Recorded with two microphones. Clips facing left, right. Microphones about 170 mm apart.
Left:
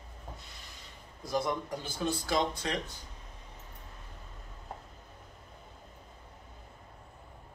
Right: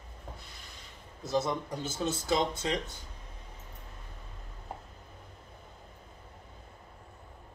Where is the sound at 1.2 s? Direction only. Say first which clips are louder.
Right 1 dB; 25° right (ahead or behind).